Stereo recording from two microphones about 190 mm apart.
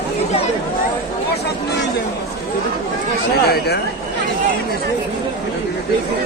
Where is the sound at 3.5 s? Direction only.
60° left (ahead or behind).